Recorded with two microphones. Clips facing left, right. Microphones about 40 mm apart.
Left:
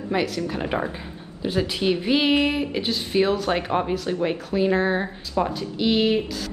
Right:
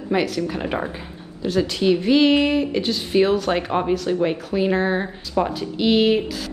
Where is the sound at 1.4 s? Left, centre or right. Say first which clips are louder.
Right 3 dB; centre.